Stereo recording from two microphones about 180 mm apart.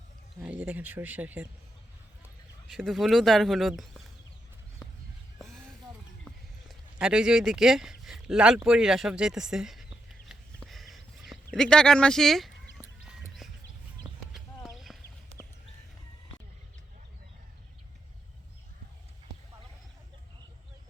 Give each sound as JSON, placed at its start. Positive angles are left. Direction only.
{"t": 0.4, "sound": "speech", "side_deg": -5}
{"t": 2.6, "sound": "speech", "side_deg": 0}
{"t": 6.2, "sound": "speech", "side_deg": -5}
{"t": 10.7, "sound": "a sound", "side_deg": 0}
{"t": 13.1, "sound": "music", "side_deg": 0}
{"t": 14.0, "sound": "clip-clop", "side_deg": -25}
{"t": 14.9, "sound": "horse", "side_deg": 0}